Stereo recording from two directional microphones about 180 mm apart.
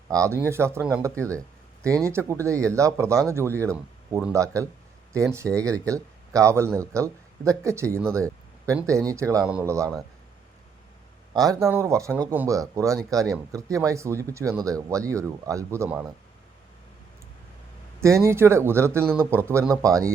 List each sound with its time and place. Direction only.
0.1 s speech: 15° right (ahead or behind)
9.5 s speech: 5° right (ahead or behind)
11.3 s speech: 20° right (ahead or behind)
18.0 s speech: 15° right (ahead or behind)